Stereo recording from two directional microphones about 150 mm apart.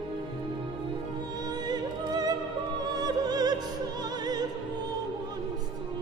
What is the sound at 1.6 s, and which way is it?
Music, 25° right (ahead or behind).